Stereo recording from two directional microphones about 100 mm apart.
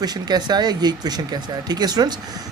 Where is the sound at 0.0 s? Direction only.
45° right (ahead or behind).